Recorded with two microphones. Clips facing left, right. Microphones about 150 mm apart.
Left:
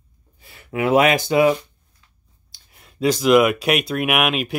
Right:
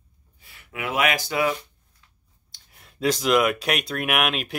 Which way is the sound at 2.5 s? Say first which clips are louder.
Left 2 dB; centre (ahead or behind).